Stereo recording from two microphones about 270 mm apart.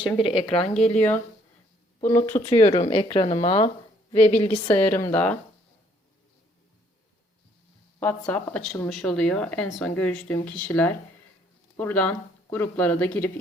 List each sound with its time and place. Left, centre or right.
0.0 s speech: centre
0.9 s speech: centre
2.4 s speech: centre
7.9 s speech: centre